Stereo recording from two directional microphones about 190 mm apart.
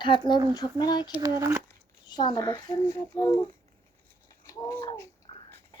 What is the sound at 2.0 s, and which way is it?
A child's voice, 20° left (ahead or behind).